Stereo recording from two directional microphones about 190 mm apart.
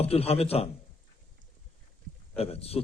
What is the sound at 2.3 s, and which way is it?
Speech, 30° left (ahead or behind).